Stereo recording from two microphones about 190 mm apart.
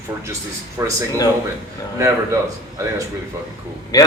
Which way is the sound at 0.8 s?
15° right (ahead or behind).